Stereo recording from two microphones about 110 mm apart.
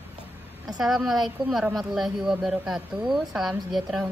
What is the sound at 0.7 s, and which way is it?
A woman's voice, centre (ahead or behind).